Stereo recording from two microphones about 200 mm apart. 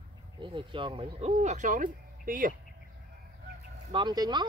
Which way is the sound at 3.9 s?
20° right (ahead or behind).